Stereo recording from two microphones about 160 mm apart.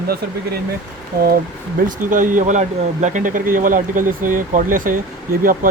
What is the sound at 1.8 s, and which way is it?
Speech, 55° right (ahead or behind).